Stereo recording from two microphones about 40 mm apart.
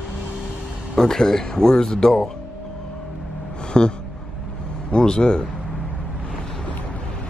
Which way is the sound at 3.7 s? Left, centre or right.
Left.